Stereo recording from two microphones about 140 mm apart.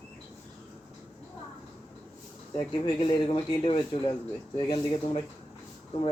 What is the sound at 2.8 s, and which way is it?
Speech, 40° left (ahead or behind).